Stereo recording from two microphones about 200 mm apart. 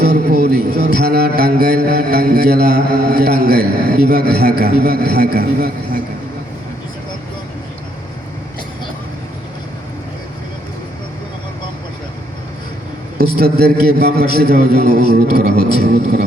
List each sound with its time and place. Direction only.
0.0 s a man's voice: 55° right (ahead or behind)
13.1 s a man's voice: 50° right (ahead or behind)